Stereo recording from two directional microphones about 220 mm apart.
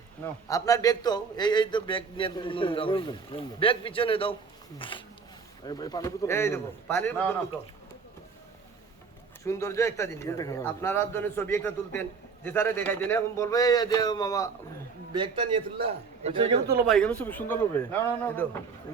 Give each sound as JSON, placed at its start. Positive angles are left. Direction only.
{"t": 0.4, "sound": "speech", "side_deg": 15}
{"t": 9.4, "sound": "speech", "side_deg": 15}
{"t": 15.1, "sound": "a man's voice", "side_deg": -20}
{"t": 16.8, "sound": "speech", "side_deg": 5}